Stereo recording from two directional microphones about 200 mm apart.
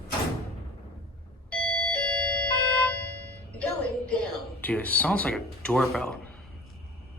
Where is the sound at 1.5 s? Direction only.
5° left (ahead or behind).